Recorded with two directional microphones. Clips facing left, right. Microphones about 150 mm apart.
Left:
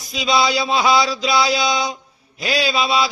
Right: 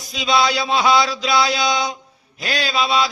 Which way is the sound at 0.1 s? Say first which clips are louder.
Even; centre (ahead or behind).